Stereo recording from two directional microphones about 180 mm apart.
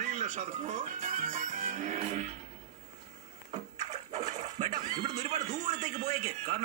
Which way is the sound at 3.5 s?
40° right (ahead or behind).